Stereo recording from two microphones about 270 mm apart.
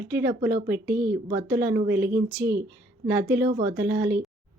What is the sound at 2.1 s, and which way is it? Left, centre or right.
Speech, right.